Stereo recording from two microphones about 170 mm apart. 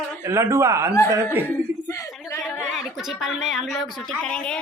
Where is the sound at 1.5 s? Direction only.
15° left (ahead or behind).